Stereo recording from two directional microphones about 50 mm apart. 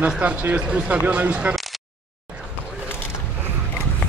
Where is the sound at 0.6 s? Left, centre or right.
Centre.